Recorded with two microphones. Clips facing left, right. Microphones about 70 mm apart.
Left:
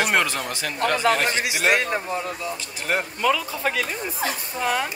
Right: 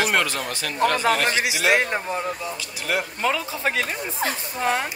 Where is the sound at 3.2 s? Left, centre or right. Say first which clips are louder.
Left 4 dB; right.